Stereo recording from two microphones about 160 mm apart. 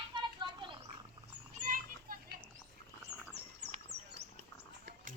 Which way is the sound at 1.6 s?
55° right (ahead or behind).